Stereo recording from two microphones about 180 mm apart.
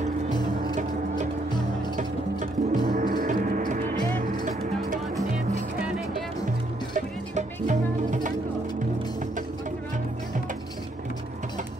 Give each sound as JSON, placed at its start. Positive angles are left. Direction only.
{"t": 2.0, "sound": "gong", "side_deg": -45}
{"t": 4.5, "sound": "music", "side_deg": -45}
{"t": 6.9, "sound": "music", "side_deg": -45}